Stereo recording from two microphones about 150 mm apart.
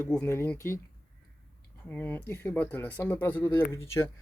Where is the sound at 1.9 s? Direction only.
10° left (ahead or behind).